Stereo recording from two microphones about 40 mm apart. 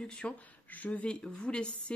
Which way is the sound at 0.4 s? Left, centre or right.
Left.